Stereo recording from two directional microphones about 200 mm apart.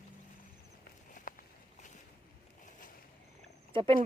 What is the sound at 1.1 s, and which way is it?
Walk, 45° left (ahead or behind).